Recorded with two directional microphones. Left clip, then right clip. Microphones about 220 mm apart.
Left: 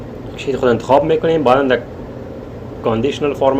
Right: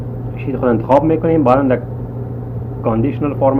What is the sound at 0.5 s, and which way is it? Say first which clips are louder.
Speech: even; 50° left (ahead or behind).